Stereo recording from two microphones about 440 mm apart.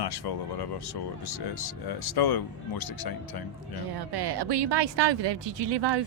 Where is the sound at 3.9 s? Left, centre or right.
Right.